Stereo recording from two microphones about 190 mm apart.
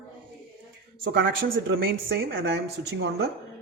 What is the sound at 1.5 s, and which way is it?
Speech, 90° right.